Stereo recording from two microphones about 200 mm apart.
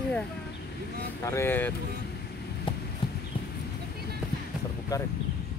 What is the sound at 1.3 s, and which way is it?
Speech, 10° left (ahead or behind).